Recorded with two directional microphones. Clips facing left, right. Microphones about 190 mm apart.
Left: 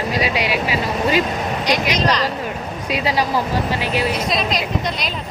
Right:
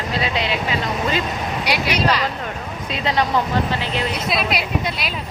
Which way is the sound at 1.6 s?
10° right (ahead or behind).